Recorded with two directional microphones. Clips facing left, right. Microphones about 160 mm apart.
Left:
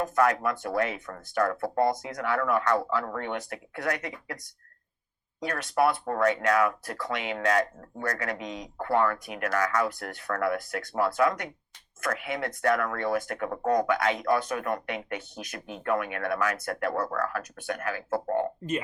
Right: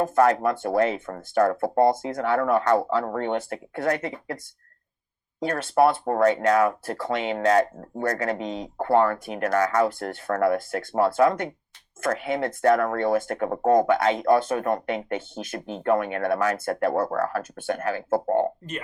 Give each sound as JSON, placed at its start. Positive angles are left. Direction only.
{"t": 0.0, "sound": "speech", "side_deg": -35}